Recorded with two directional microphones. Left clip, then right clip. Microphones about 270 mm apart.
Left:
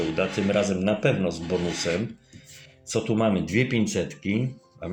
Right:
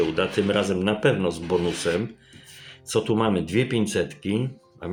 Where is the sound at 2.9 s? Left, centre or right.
Centre.